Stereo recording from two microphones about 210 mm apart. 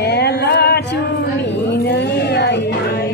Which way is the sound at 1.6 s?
55° left (ahead or behind).